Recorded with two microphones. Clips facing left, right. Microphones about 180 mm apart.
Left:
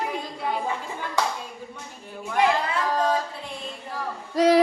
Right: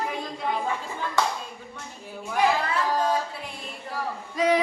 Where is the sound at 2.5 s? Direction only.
5° right (ahead or behind).